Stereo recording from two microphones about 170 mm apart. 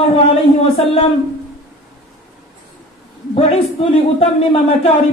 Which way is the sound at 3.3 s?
35° left (ahead or behind).